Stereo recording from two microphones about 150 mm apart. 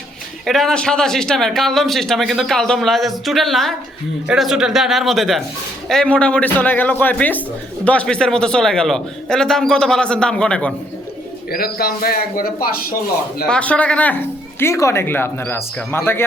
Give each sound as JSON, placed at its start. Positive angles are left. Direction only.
{"t": 0.4, "sound": "a man's voice", "side_deg": 0}
{"t": 11.5, "sound": "a man's voice", "side_deg": 90}
{"t": 13.5, "sound": "speech", "side_deg": 10}